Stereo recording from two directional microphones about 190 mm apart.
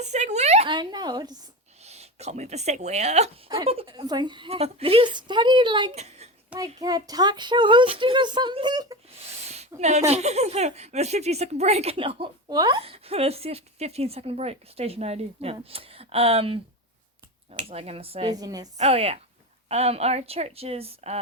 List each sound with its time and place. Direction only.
0.0 s a woman's voice: 35° right (ahead or behind); by 1.4 s 20° right (ahead or behind)
1.8 s a woman's voice: 35° right (ahead or behind)
6.8 s a woman's voice: 20° right (ahead or behind)
9.5 s speech: 35° right (ahead or behind)
18.3 s a woman's voice: 20° right (ahead or behind)
18.8 s speech: 35° right (ahead or behind)